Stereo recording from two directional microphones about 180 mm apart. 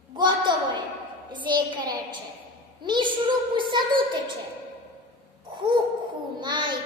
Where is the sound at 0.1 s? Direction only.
25° right (ahead or behind).